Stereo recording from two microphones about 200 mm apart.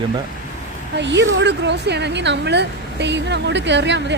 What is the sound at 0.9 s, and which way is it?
A woman's voice, 60° right (ahead or behind).